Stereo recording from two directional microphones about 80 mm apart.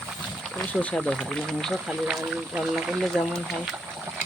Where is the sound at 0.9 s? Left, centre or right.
Centre.